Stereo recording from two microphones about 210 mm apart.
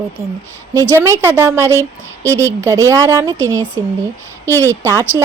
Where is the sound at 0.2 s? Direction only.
10° right (ahead or behind).